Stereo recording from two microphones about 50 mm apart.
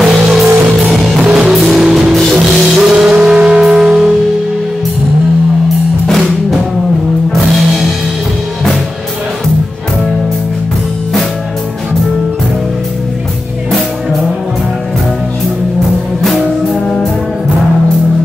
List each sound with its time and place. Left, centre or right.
0.0 s music: centre
16.2 s music: centre